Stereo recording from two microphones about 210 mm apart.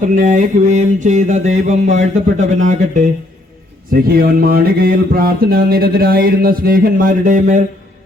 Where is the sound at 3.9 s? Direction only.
45° right (ahead or behind).